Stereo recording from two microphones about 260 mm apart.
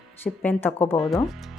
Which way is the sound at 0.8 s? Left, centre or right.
Centre.